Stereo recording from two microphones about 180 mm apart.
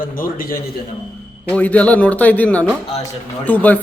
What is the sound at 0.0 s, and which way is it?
Speech, 50° left (ahead or behind).